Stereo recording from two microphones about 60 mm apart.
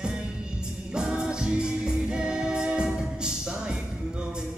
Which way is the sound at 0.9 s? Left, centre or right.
Centre.